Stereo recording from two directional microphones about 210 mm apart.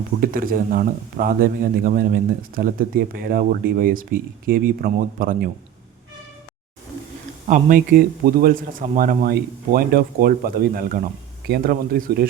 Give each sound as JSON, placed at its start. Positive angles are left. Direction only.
{"t": 0.2, "sound": "speech", "side_deg": -45}
{"t": 7.4, "sound": "speech", "side_deg": -40}